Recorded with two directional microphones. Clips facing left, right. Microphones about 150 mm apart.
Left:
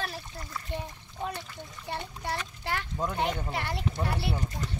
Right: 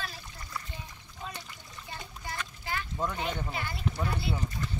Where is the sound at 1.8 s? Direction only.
70° left (ahead or behind).